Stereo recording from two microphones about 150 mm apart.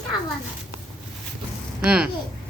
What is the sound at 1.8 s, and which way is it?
Speech, 5° right (ahead or behind).